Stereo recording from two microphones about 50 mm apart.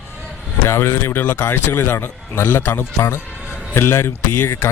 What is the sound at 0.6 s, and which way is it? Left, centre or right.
A man's voice, left.